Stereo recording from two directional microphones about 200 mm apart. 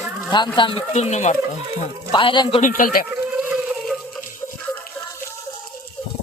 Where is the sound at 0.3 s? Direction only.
20° left (ahead or behind).